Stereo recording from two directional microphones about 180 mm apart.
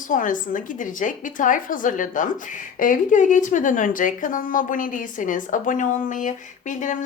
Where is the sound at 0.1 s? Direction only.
50° left (ahead or behind).